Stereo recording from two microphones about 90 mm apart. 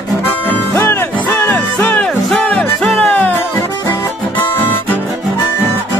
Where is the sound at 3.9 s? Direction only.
25° left (ahead or behind).